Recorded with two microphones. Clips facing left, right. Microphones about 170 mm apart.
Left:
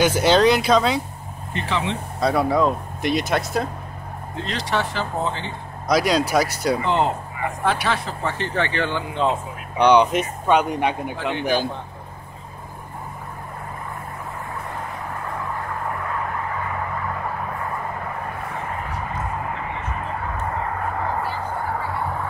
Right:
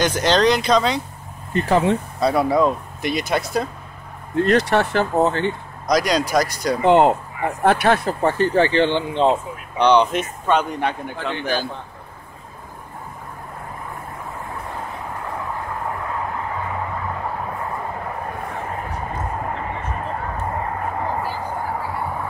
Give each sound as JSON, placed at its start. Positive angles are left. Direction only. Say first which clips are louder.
{"t": 0.0, "sound": "speech", "louder": "left 1 dB", "side_deg": 10}
{"t": 1.5, "sound": "speech", "louder": "right 8 dB", "side_deg": -45}
{"t": 2.1, "sound": "speech", "louder": "left 1 dB", "side_deg": 0}
{"t": 4.4, "sound": "speech", "louder": "right 9 dB", "side_deg": -55}
{"t": 5.9, "sound": "speech", "louder": "even", "side_deg": 5}
{"t": 6.8, "sound": "speech", "louder": "right 7 dB", "side_deg": -60}
{"t": 9.8, "sound": "speech", "louder": "even", "side_deg": 10}